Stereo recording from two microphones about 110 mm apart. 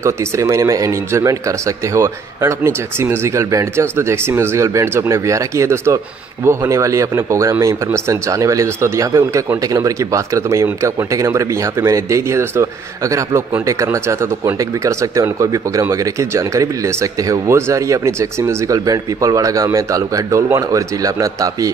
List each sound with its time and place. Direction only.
0.0 s speech: 25° right (ahead or behind)